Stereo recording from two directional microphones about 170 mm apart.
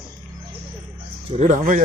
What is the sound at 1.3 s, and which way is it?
Speech, 40° right (ahead or behind).